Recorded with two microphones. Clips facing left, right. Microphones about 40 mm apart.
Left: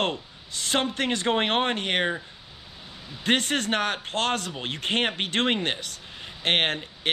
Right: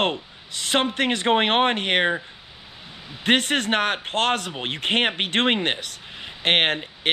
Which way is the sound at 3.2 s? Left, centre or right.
Right.